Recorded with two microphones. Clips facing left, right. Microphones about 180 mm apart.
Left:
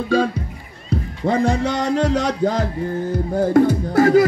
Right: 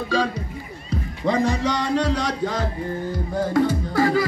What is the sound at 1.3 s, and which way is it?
Speech, 55° left (ahead or behind).